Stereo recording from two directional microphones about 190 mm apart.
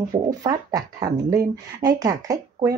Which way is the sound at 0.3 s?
20° right (ahead or behind).